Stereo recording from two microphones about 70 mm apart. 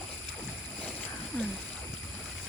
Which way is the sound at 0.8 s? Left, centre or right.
Left.